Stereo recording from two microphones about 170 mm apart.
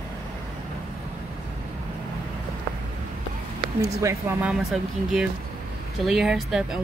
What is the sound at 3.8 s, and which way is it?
Speech, 15° right (ahead or behind).